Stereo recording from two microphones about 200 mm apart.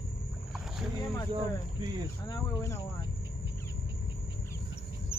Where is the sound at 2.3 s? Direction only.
15° left (ahead or behind).